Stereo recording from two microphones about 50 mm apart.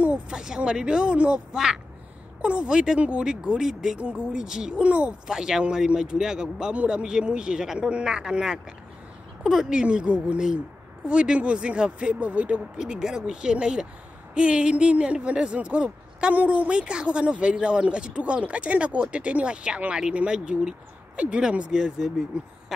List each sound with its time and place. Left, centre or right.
0.3 s speech: centre
4.8 s speech: right
5.2 s speech: centre
12.8 s speech: centre
22.0 s speech: centre